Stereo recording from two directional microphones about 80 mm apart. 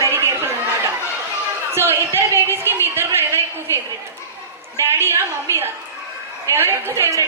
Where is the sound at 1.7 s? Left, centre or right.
Right.